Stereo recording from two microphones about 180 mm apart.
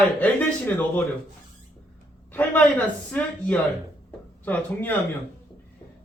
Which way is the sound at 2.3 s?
10° left (ahead or behind).